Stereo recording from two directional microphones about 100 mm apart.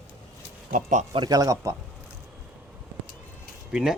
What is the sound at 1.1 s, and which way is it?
Speech, 40° right (ahead or behind).